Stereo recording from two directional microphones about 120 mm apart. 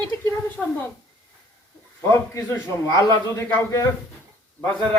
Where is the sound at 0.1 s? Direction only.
25° left (ahead or behind).